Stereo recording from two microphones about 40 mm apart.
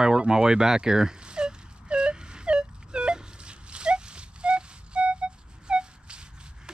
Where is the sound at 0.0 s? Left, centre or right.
Centre.